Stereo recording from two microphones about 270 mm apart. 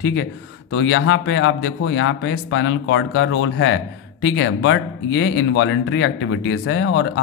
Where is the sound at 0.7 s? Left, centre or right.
Left.